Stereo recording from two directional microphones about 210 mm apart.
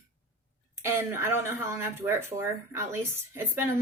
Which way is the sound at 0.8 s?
10° right (ahead or behind).